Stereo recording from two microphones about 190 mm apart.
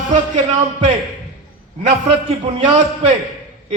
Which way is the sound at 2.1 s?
30° right (ahead or behind).